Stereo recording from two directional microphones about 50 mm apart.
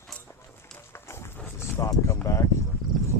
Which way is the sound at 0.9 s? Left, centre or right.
Left.